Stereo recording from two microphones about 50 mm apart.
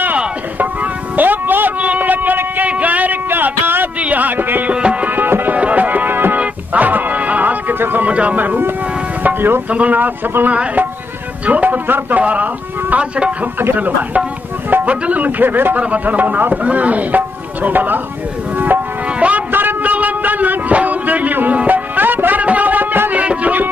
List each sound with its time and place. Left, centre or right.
1.1 s a sound: right
4.6 s music: right
5.0 s music: right
5.6 s music: right
6.4 s music: right
8.0 s speech: right
8.4 s a man's voice: right
9.7 s a man's voice: right
13.7 s a man's voice: right
19.1 s a sound: right
19.5 s a sound: right
23.2 s music: right